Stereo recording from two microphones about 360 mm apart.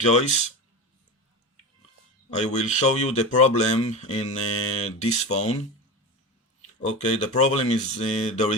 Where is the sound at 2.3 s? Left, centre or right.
Centre.